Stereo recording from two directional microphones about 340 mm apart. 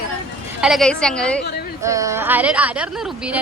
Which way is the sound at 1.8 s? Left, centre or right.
Centre.